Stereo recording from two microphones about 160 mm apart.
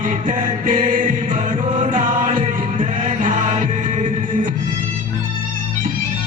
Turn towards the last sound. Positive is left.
turn(degrees=-50)  # may be behind; listen again after turning